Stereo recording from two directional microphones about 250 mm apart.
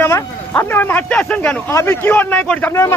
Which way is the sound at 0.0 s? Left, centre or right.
Centre.